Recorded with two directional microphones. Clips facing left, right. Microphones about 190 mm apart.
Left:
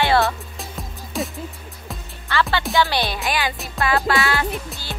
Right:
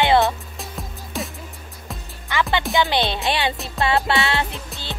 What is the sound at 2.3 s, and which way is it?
Music, 15° right (ahead or behind).